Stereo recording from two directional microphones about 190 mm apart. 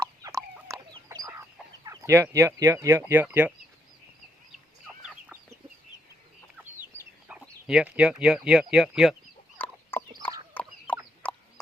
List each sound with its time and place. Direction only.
0.0 s fowl: 15° right (ahead or behind)
1.8 s speech: 15° right (ahead or behind)
4.9 s chicken: 5° right (ahead or behind)
6.6 s chicken: 10° right (ahead or behind)
7.4 s speech: 5° right (ahead or behind)
9.6 s chicken: 10° left (ahead or behind)